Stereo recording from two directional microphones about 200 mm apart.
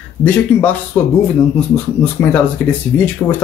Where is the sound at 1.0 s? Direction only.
10° left (ahead or behind).